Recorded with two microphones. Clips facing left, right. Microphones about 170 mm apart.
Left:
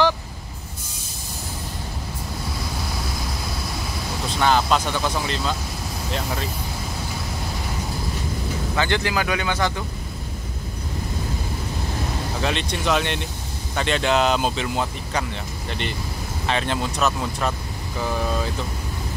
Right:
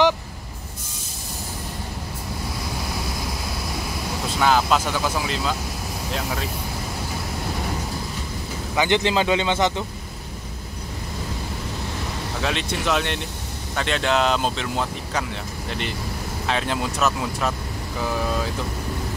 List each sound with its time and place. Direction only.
4.4 s speech: 5° right (ahead or behind)
8.7 s speech: 20° right (ahead or behind)
12.4 s speech: centre (ahead or behind)
16.4 s speech: centre (ahead or behind)